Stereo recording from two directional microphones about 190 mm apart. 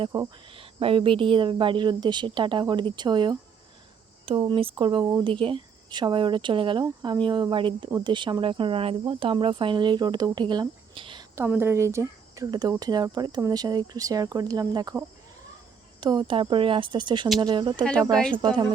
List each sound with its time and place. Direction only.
0.0 s speech: 20° right (ahead or behind)
11.4 s speech: 10° right (ahead or behind)
16.0 s speech: 20° right (ahead or behind)
18.1 s speech: 5° left (ahead or behind)